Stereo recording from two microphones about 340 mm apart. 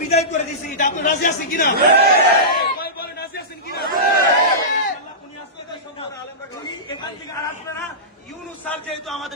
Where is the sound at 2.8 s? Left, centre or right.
Left.